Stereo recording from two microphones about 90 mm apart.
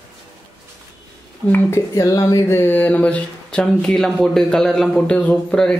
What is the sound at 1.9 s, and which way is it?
Speech, 45° left (ahead or behind).